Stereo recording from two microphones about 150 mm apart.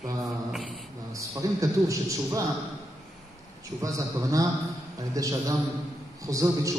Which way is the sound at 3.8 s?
20° right (ahead or behind).